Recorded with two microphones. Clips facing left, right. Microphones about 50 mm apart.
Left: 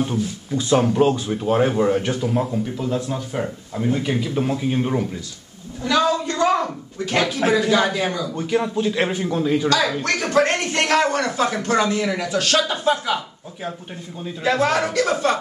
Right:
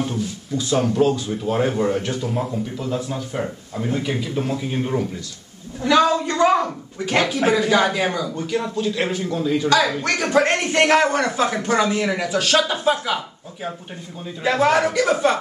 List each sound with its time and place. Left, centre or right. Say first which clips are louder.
0.0 s speech: left 2 dB; centre
0.6 s speech: left 2 dB; left
5.8 s a woman's voice: right 3 dB; centre
6.5 s speech: right 2 dB; centre
8.3 s speech: left 2 dB; centre
9.7 s speech: right 1 dB; centre
14.4 s speech: right 2 dB; centre